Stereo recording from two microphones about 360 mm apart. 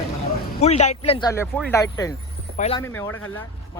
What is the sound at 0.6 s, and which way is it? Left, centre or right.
Speech, centre.